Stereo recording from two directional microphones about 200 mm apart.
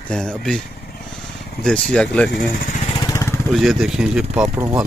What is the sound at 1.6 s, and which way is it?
Speech, 5° left (ahead or behind).